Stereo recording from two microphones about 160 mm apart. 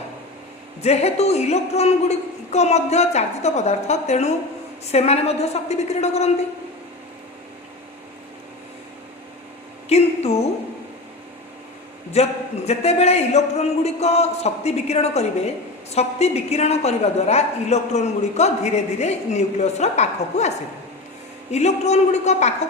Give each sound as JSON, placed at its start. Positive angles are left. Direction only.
{"t": 0.8, "sound": "a woman's voice", "side_deg": 40}
{"t": 9.9, "sound": "a sound", "side_deg": 40}
{"t": 12.1, "sound": "a man's voice", "side_deg": 40}
{"t": 21.5, "sound": "a woman's voice", "side_deg": 45}